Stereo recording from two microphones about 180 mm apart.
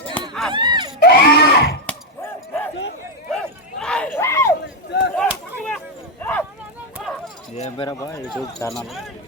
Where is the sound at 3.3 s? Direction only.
5° left (ahead or behind).